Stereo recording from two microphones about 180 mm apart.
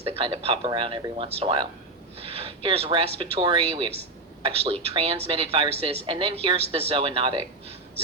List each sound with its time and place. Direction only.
0.0 s a woman's voice: 30° right (ahead or behind)
4.9 s a woman's voice: 30° right (ahead or behind)